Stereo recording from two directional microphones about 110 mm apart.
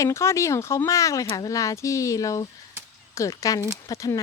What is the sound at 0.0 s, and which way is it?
A woman's voice, 25° left (ahead or behind).